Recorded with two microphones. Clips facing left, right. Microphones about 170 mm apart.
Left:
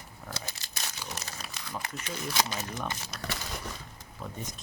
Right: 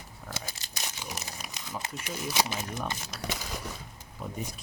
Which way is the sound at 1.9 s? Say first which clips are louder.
Right 2 dB; 10° right (ahead or behind).